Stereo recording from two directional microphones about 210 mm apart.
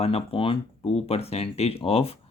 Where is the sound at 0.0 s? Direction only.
25° left (ahead or behind).